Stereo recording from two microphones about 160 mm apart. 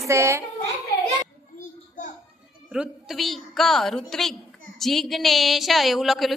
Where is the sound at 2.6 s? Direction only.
5° right (ahead or behind).